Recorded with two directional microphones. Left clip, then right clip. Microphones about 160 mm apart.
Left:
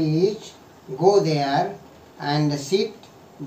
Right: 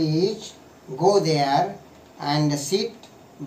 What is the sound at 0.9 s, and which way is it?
A man's voice, 10° left (ahead or behind).